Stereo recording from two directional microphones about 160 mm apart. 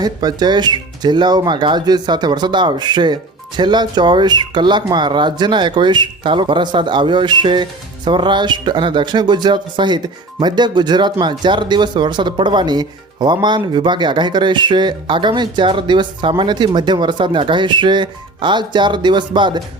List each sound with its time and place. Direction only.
0.0 s speech: 25° right (ahead or behind)